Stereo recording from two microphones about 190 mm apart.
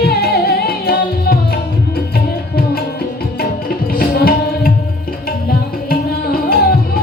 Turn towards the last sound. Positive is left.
turn(degrees=50)  # may be behind; listen again after turning